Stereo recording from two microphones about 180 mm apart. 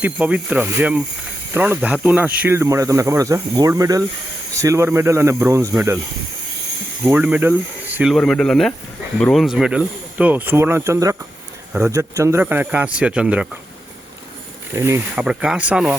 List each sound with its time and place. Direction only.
0.0 s speech: 5° right (ahead or behind)
7.0 s speech: 10° right (ahead or behind)
14.7 s speech: 15° right (ahead or behind)